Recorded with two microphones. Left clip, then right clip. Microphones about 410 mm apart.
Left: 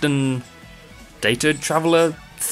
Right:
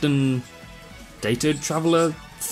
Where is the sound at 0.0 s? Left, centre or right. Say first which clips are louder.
Left 2 dB; centre.